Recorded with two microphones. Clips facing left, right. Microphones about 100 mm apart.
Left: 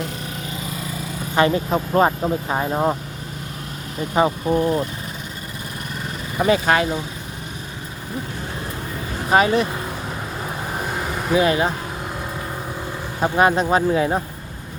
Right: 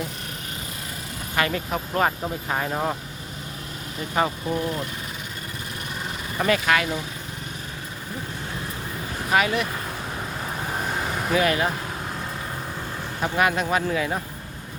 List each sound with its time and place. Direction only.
1.4 s speech: 25° left (ahead or behind)
4.4 s speech: 35° left (ahead or behind)
6.3 s speech: 15° left (ahead or behind)
6.7 s speech: 30° left (ahead or behind)
9.3 s speech: 30° left (ahead or behind)
10.7 s vehicle: 5° left (ahead or behind)
11.3 s speech: 25° left (ahead or behind)
13.1 s speech: 25° left (ahead or behind)